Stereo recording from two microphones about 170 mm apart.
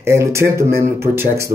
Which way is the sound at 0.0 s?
15° right (ahead or behind).